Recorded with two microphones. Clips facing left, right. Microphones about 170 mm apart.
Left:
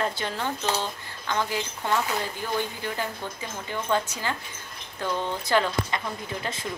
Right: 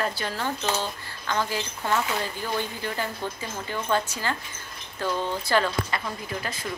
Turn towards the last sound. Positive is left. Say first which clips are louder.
# even
turn(degrees=25)  # may be behind; listen again after turning